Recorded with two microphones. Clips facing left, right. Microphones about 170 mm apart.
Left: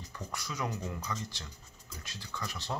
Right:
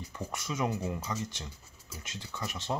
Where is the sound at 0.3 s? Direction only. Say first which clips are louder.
Right 5 dB; 25° right (ahead or behind).